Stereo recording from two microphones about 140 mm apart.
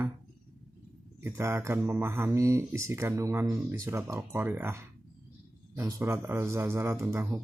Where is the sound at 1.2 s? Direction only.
20° right (ahead or behind).